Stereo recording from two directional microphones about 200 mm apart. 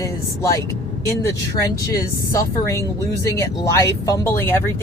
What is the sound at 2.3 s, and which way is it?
Speech, 15° left (ahead or behind).